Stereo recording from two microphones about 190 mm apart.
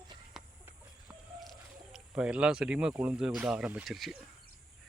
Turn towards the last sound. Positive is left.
turn(degrees=0)  # may be behind; listen again after turning